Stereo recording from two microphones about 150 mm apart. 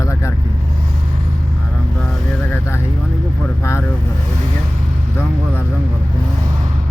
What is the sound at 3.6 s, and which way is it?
Speech, 15° left (ahead or behind).